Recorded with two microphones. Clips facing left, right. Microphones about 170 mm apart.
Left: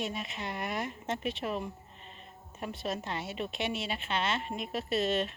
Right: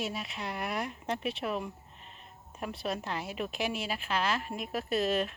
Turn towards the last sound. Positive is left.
turn(degrees=0)  # may be behind; listen again after turning